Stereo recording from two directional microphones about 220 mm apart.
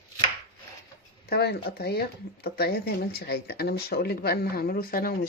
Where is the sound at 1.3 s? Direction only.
45° left (ahead or behind).